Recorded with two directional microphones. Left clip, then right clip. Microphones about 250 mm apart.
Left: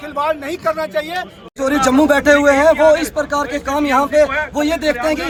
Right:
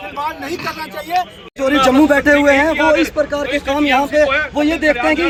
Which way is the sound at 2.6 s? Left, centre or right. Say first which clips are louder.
Left 2 dB; left.